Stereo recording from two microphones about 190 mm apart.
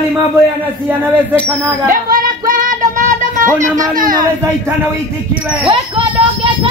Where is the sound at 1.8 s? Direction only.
45° right (ahead or behind).